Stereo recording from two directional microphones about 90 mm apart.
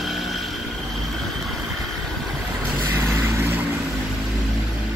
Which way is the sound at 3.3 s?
25° right (ahead or behind).